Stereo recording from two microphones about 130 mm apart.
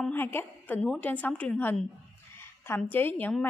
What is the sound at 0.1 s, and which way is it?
A woman's voice, 15° left (ahead or behind).